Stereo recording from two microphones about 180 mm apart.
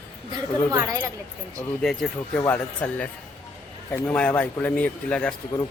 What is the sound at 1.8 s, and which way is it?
Speech, 5° left (ahead or behind).